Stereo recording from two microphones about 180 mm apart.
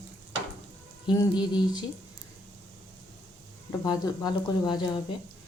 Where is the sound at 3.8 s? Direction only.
20° left (ahead or behind).